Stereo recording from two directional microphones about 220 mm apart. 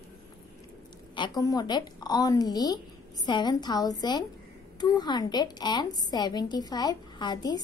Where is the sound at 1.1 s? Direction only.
20° left (ahead or behind).